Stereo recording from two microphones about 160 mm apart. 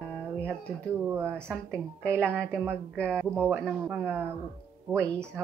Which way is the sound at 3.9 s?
15° right (ahead or behind).